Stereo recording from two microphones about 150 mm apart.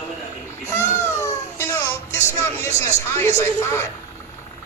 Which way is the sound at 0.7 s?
20° left (ahead or behind).